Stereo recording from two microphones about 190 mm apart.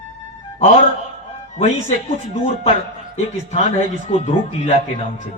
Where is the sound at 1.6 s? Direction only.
35° left (ahead or behind).